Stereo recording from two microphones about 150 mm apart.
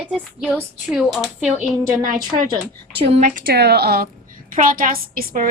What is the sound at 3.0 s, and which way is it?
Speech, 40° right (ahead or behind).